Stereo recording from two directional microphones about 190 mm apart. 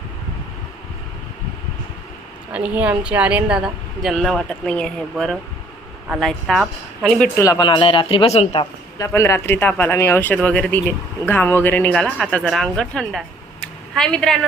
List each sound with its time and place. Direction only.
2.5 s a woman's voice: 5° right (ahead or behind)
7.3 s speech: 20° left (ahead or behind)
9.0 s speech: 15° left (ahead or behind)